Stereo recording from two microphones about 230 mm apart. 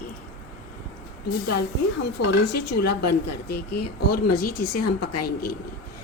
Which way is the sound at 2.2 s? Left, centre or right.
Left.